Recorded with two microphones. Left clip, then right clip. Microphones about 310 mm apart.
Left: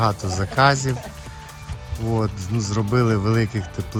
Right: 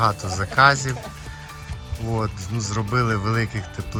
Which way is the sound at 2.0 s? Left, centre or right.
Centre.